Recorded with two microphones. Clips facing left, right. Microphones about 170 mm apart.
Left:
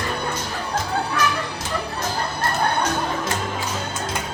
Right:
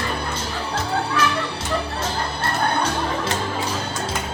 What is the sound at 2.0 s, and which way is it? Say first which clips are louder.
Music: even; 30° right (ahead or behind).